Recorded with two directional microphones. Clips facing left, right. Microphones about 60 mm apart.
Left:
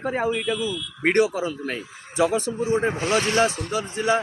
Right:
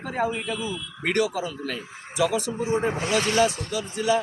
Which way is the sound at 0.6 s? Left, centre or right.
Right.